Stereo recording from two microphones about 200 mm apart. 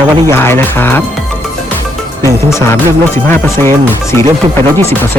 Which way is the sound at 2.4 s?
15° left (ahead or behind).